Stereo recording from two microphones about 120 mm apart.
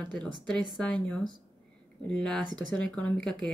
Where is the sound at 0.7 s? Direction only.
10° left (ahead or behind).